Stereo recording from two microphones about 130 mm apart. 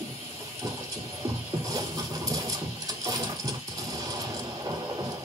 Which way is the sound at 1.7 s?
25° right (ahead or behind).